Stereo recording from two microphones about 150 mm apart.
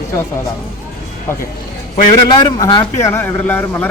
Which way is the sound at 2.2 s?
30° left (ahead or behind).